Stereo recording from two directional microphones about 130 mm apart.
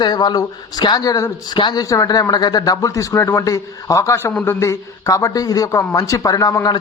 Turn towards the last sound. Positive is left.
turn(degrees=25)  # may be behind; listen again after turning